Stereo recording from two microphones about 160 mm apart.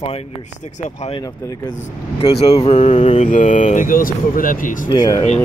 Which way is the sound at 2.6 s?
40° left (ahead or behind).